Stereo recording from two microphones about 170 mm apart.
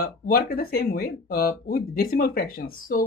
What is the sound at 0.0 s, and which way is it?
Speech, 60° left (ahead or behind).